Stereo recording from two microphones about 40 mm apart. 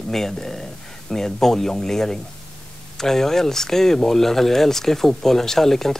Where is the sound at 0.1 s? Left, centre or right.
Centre.